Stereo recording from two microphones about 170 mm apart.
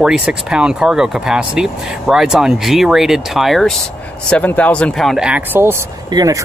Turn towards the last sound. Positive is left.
turn(degrees=-25)  # may be behind; listen again after turning